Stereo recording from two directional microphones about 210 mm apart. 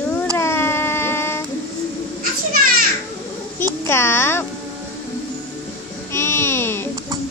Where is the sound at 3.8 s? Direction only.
10° left (ahead or behind).